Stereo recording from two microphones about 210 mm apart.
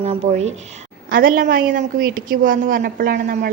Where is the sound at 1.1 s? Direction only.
40° right (ahead or behind).